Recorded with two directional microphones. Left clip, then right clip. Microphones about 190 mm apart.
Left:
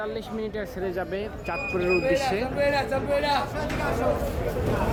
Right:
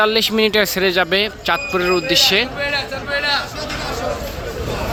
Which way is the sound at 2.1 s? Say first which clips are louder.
Right 10 dB; 5° left (ahead or behind).